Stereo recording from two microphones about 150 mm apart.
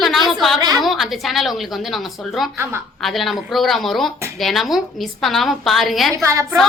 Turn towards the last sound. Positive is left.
turn(degrees=-20)  # may be behind; listen again after turning